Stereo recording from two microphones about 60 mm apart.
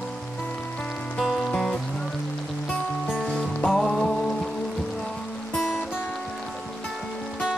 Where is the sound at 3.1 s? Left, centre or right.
Centre.